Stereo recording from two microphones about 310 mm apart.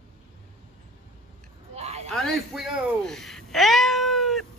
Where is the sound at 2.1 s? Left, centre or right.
Centre.